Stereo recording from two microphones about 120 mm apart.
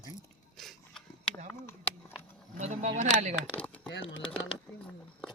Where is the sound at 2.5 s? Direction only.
90° right.